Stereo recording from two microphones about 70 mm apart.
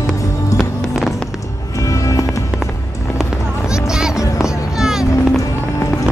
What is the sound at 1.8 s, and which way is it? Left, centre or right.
Music, left.